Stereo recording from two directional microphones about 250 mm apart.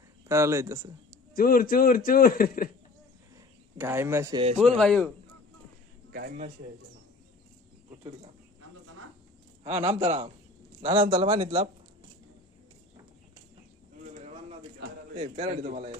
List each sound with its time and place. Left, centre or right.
0.3 s speech: centre
1.3 s a man's voice: left
3.7 s speech: centre
4.6 s a man's voice: centre
6.1 s a man's voice: right
9.6 s a man's voice: right
15.1 s speech: right